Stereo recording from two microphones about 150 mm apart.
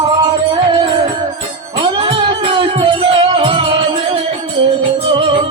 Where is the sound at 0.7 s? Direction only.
35° right (ahead or behind).